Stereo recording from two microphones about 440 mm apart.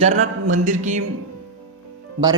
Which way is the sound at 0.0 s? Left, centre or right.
Centre.